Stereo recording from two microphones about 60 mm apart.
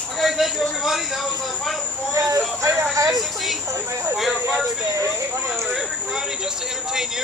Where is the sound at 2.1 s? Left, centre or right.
Right.